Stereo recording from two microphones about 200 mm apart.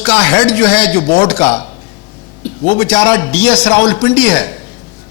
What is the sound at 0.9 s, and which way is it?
Speech, 20° left (ahead or behind).